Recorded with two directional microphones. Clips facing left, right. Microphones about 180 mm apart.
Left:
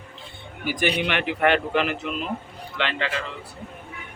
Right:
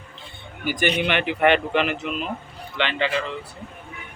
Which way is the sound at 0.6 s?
Centre (ahead or behind).